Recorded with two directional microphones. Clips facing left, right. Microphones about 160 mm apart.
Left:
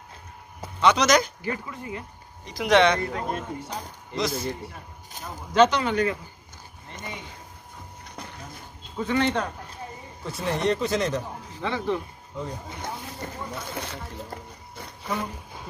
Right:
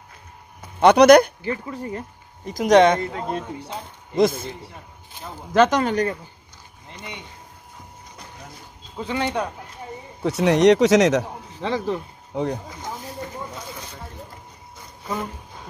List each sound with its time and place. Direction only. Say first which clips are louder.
0.7 s speech: right 9 dB; 60° right (ahead or behind)
1.7 s speech: right 5 dB; 40° right (ahead or behind)
3.0 s a man's voice: right 2 dB; 25° right (ahead or behind)
4.2 s speech: right 9 dB; 50° right (ahead or behind)
5.5 s speech: right 2 dB; 50° right (ahead or behind)
8.9 s speech: left 1 dB; 15° right (ahead or behind)
10.2 s speech: right 10 dB; 75° right (ahead or behind)
11.6 s speech: right 3 dB; 35° right (ahead or behind)
12.3 s speech: right 9 dB; 75° right (ahead or behind)